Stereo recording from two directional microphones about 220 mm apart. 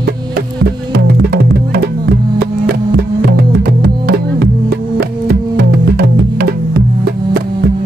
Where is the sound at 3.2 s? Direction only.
45° right (ahead or behind).